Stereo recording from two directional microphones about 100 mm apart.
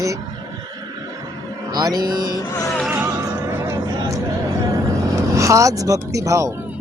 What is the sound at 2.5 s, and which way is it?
Music, 35° left (ahead or behind).